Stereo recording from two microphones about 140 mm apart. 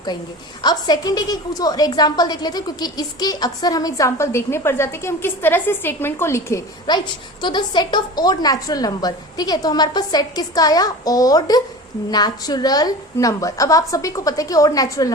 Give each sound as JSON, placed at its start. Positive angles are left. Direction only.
{"t": 0.6, "sound": "a woman's voice", "side_deg": 30}
{"t": 6.9, "sound": "a woman's voice", "side_deg": 30}